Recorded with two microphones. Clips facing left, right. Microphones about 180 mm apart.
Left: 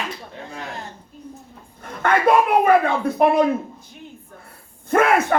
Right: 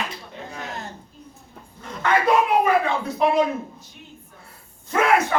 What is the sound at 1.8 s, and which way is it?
Speech, 55° left (ahead or behind).